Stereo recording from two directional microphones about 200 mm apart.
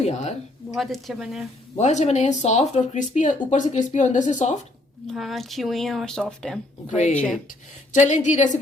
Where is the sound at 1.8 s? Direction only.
35° left (ahead or behind).